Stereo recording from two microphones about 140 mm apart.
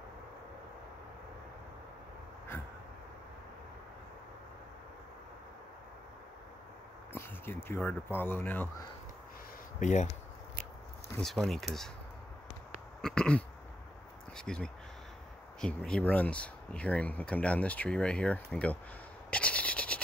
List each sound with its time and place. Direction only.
7.1 s speech: 15° left (ahead or behind)
9.8 s speech: 60° left (ahead or behind)
11.1 s speech: centre (ahead or behind)
13.0 s speech: 5° left (ahead or behind)
19.3 s rub: 10° left (ahead or behind)